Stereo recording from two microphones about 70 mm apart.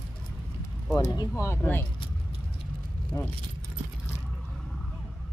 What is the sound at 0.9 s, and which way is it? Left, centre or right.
Speech, left.